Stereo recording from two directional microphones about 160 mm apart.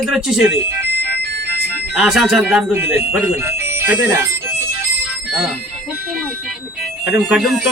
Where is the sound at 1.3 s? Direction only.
90° right.